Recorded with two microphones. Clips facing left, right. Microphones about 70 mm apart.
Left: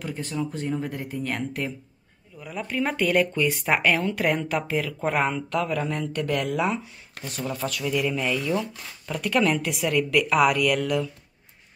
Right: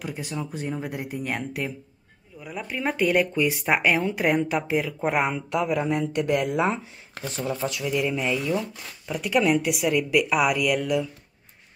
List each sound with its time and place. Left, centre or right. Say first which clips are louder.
0.0 s speech: left 2 dB; centre